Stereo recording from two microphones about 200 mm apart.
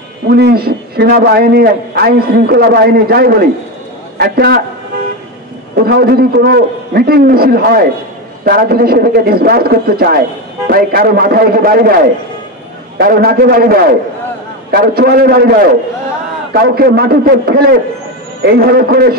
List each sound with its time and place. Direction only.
0.3 s a man's voice: 50° right (ahead or behind)
5.8 s a man's voice: 50° right (ahead or behind)
12.9 s a man's voice: 50° right (ahead or behind)
16.5 s a man's voice: 50° right (ahead or behind)